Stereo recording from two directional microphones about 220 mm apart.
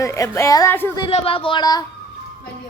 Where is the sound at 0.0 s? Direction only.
15° left (ahead or behind).